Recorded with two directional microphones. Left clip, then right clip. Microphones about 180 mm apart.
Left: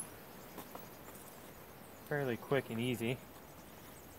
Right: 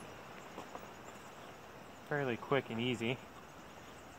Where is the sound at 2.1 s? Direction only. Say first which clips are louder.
Right 1 dB; 5° left (ahead or behind).